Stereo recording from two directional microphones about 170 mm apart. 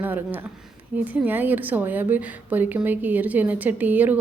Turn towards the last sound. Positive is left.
turn(degrees=-10)  # may be behind; listen again after turning